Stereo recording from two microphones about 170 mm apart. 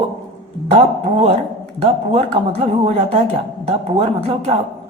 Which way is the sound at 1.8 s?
30° right (ahead or behind).